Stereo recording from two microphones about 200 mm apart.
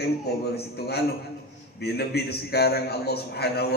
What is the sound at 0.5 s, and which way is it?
A man's voice, 55° left (ahead or behind).